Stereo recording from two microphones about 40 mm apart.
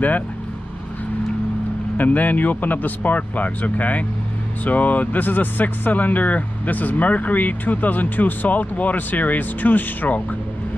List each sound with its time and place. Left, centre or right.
2.0 s speech: left